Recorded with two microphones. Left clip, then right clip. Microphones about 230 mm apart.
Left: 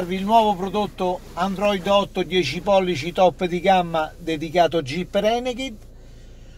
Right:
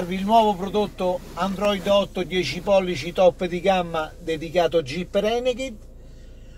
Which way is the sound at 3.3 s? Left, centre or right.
Left.